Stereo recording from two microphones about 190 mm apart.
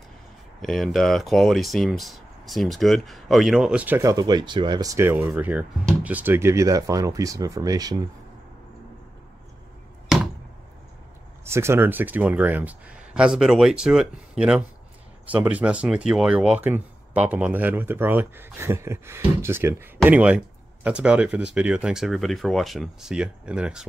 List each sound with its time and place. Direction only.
0.6 s speech: centre (ahead or behind); by 8.0 s 20° right (ahead or behind)
11.4 s speech: 15° right (ahead or behind)